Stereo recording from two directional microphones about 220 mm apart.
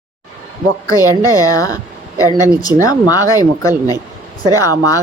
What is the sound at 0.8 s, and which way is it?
Speech, 15° left (ahead or behind).